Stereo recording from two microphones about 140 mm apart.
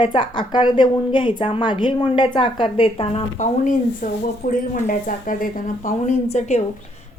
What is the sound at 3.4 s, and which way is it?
A woman's voice, 65° left (ahead or behind).